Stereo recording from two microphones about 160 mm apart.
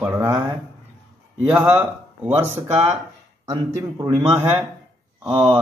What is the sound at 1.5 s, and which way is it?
A man's voice, 10° right (ahead or behind).